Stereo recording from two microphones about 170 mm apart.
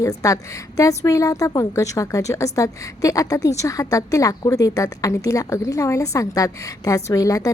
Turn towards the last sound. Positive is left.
turn(degrees=20)  # may be behind; listen again after turning